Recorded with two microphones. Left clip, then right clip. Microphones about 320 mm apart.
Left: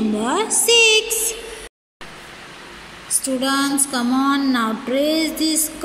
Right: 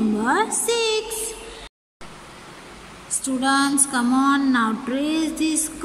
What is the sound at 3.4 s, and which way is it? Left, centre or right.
Female singing, right.